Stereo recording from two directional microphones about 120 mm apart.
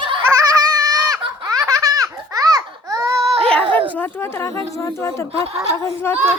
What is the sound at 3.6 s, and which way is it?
Bow-wow, 45° right (ahead or behind).